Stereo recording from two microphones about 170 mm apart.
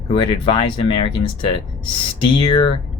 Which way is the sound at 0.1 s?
30° left (ahead or behind).